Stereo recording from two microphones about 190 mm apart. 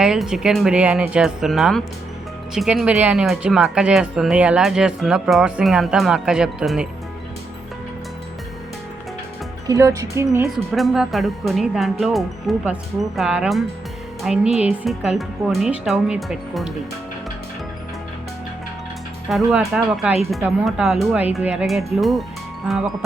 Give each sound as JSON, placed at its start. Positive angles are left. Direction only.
{"t": 0.0, "sound": "speech", "side_deg": -5}
{"t": 9.6, "sound": "speech", "side_deg": -15}
{"t": 10.7, "sound": "speech", "side_deg": 0}
{"t": 19.5, "sound": "speech", "side_deg": 0}